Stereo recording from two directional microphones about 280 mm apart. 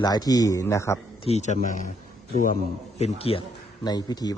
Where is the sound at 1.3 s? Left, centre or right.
Left.